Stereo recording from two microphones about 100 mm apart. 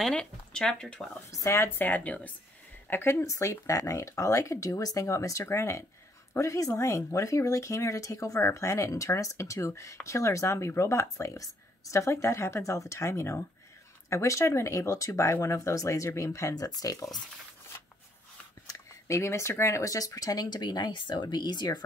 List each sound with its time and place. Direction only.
0.0 s speech: 10° left (ahead or behind)
1.3 s speech: 30° left (ahead or behind)
18.7 s speech: 30° left (ahead or behind); by 21.8 s 50° left (ahead or behind)